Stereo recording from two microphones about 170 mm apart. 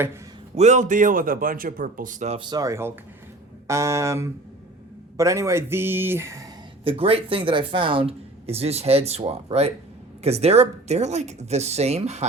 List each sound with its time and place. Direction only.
0.5 s speech: 40° right (ahead or behind)
2.4 s speech: 25° right (ahead or behind)
6.8 s speech: 35° right (ahead or behind)